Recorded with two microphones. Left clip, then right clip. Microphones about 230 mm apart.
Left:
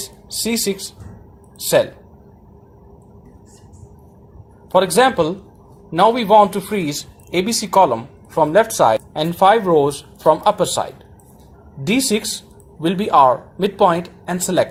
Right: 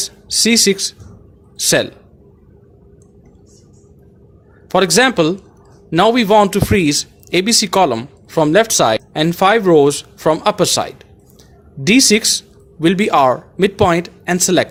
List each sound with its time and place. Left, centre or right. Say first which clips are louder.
0.0 s a sound: right 9 dB; right
1.5 s a man's voice: right 1 dB; right
4.7 s a man's voice: right 1 dB; right
12.8 s speech: right 6 dB; right
13.1 s a man's voice: left 3 dB; right